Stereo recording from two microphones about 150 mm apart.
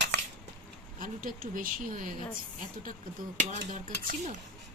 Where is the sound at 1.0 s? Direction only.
70° right (ahead or behind).